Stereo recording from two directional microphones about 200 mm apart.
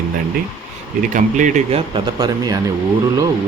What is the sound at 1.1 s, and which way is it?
Speech, 40° right (ahead or behind).